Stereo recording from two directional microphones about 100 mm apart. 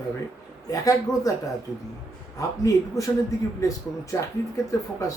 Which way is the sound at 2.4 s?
35° left (ahead or behind).